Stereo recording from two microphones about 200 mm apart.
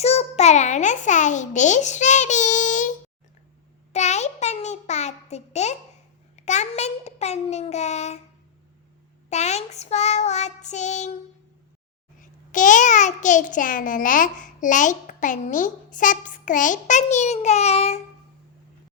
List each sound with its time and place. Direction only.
0.0 s a child's voice: 30° left (ahead or behind)
3.9 s a child's voice: 35° left (ahead or behind)
9.3 s a child's voice: 35° left (ahead or behind)
12.2 s a child's voice: 40° left (ahead or behind)